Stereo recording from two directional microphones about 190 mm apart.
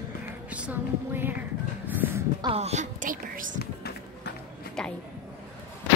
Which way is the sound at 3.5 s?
55° left (ahead or behind).